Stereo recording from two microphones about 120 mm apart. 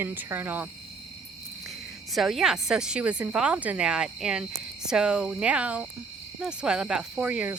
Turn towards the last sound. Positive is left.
turn(degrees=-10)  # may be behind; listen again after turning